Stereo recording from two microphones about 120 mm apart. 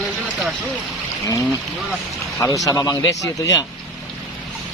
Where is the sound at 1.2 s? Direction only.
30° left (ahead or behind).